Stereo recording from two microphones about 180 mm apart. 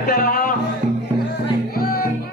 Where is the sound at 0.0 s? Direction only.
55° left (ahead or behind).